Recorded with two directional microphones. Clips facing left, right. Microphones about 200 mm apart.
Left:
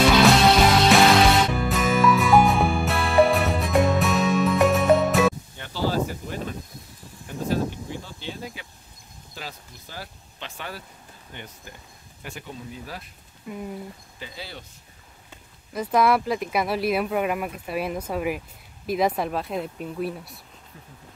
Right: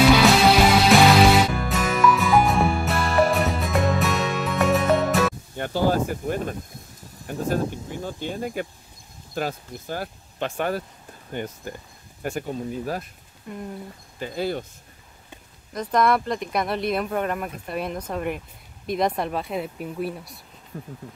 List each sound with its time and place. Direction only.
0.2 s music: 5° right (ahead or behind)
5.6 s a sound: 50° right (ahead or behind)
9.3 s speech: 50° right (ahead or behind)
13.5 s speech: 5° left (ahead or behind)
14.2 s speech: 50° right (ahead or behind)
15.7 s speech: 5° left (ahead or behind)
20.7 s speech: 40° right (ahead or behind)